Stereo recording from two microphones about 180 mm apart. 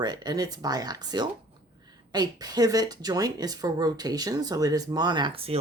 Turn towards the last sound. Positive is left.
turn(degrees=-30)  # may be behind; listen again after turning